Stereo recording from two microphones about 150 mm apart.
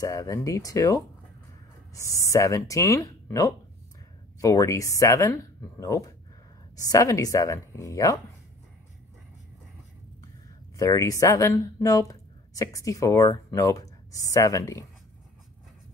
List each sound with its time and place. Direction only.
0.0 s speech: 25° left (ahead or behind)
10.8 s speech: 20° left (ahead or behind)